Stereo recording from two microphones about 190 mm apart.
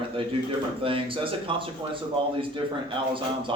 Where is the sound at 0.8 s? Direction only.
30° right (ahead or behind).